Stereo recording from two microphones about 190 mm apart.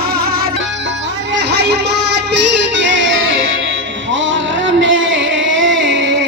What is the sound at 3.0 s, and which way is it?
Music, 90° right.